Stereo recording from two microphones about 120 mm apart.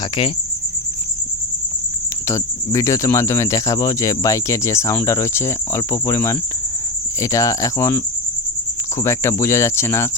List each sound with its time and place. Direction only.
0.0 s cricket: 50° left (ahead or behind)
2.7 s speech: 25° left (ahead or behind)